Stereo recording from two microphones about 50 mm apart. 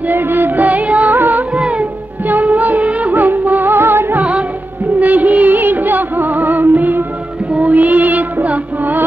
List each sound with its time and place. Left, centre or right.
0.1 s music: right
0.7 s music: right
1.1 s music: right
1.5 s music: right
2.2 s music of bollywood: right
4.2 s music: right
4.9 s music: right